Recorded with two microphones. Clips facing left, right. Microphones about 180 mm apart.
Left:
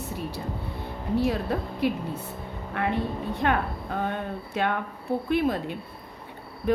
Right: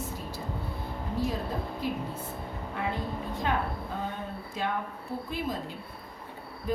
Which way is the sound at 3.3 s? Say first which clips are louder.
Left 4 dB; 65° left (ahead or behind).